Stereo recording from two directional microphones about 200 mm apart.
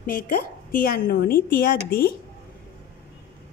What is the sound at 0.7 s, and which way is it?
Speech, 45° left (ahead or behind).